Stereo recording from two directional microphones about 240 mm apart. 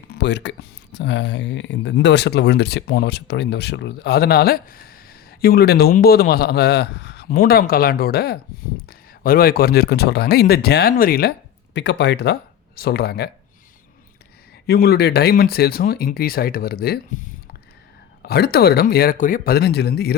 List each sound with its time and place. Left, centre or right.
0.1 s speech: left
14.7 s speech: left